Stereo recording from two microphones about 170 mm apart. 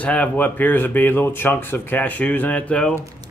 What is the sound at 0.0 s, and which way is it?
Speech, 10° left (ahead or behind).